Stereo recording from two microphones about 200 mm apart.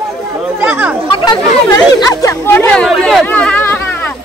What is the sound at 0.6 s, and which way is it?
Chatter, 10° right (ahead or behind).